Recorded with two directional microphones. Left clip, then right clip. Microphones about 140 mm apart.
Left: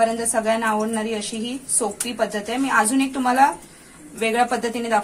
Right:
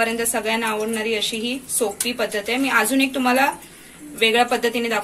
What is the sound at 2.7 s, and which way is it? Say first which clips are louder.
Speech: left 1 dB; 10° left (ahead or behind).